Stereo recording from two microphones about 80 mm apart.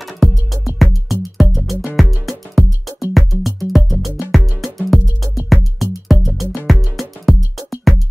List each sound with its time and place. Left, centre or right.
0.2 s music: centre